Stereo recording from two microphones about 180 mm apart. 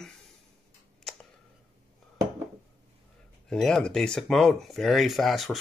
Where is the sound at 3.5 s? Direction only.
5° left (ahead or behind).